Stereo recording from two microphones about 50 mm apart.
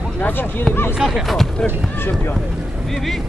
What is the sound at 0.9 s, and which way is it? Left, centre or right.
Speech, centre.